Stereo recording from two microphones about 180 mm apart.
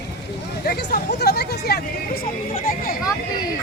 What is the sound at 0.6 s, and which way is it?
Speech, 60° left (ahead or behind).